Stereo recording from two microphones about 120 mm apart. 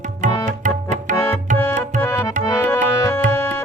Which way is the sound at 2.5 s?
20° left (ahead or behind).